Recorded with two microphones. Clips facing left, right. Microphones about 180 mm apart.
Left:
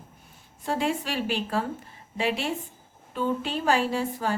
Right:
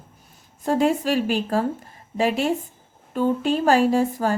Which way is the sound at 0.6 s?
45° right (ahead or behind).